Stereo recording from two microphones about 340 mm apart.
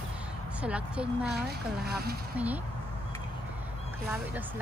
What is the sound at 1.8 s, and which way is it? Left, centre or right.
Speech, right.